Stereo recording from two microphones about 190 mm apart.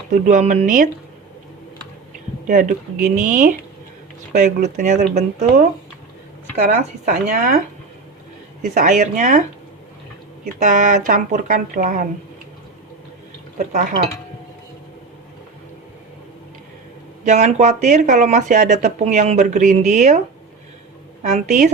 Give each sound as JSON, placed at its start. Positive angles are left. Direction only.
{"t": 0.1, "sound": "speech", "side_deg": -40}
{"t": 2.5, "sound": "speech", "side_deg": -45}
{"t": 6.7, "sound": "speech", "side_deg": -45}
{"t": 8.6, "sound": "speech", "side_deg": -45}
{"t": 10.6, "sound": "speech", "side_deg": -40}
{"t": 17.2, "sound": "speech", "side_deg": -40}